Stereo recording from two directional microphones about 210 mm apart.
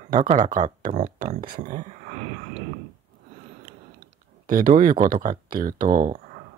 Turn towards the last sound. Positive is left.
turn(degrees=-40)  # may be behind; listen again after turning